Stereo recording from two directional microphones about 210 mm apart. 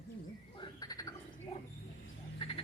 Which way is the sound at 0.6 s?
20° left (ahead or behind).